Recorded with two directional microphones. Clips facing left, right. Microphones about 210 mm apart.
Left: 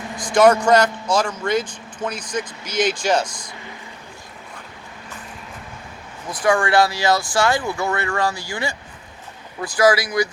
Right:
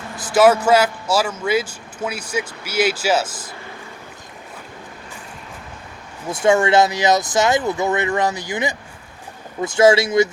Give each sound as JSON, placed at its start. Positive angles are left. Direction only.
{"t": 0.2, "sound": "a man's voice", "side_deg": -5}
{"t": 6.3, "sound": "speech", "side_deg": -25}